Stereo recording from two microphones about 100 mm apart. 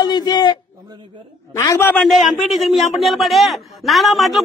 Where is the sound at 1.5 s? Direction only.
30° left (ahead or behind).